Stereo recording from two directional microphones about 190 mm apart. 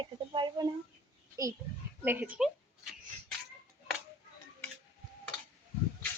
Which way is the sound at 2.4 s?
Centre (ahead or behind).